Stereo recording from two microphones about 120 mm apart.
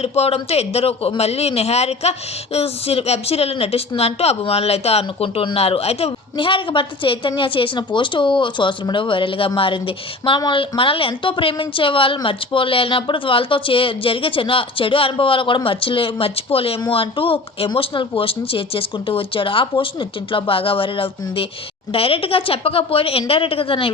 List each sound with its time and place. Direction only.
0.0 s speech: 60° left (ahead or behind)
6.3 s a woman's voice: 45° left (ahead or behind)